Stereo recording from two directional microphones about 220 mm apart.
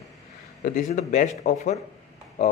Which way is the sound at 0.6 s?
40° left (ahead or behind).